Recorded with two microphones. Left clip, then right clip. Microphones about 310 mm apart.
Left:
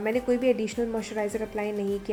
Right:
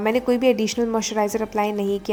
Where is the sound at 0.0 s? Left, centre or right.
Right.